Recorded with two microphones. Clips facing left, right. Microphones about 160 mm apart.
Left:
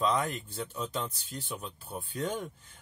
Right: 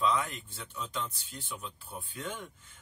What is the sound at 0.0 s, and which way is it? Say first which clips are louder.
Speech: left 1 dB; 40° left (ahead or behind).